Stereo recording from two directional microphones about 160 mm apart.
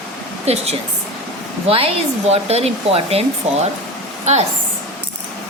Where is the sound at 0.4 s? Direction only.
40° right (ahead or behind).